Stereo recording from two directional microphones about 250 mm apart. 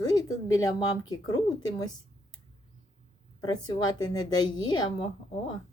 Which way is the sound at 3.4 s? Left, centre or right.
Centre.